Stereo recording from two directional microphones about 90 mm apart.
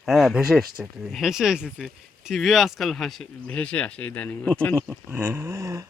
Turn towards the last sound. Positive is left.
turn(degrees=-35)  # may be behind; listen again after turning